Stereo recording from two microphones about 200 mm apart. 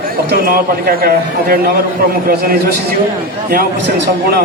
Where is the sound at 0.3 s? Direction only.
50° right (ahead or behind).